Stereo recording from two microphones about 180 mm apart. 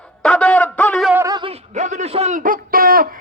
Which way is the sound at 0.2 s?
5° left (ahead or behind).